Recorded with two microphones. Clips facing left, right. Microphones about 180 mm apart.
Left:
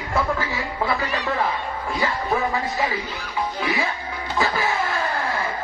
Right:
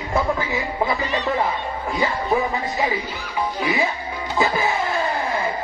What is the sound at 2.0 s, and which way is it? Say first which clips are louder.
Speech: right 2 dB; 15° right (ahead or behind).